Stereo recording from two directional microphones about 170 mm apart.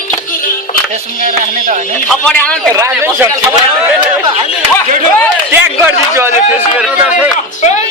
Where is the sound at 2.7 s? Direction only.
15° right (ahead or behind).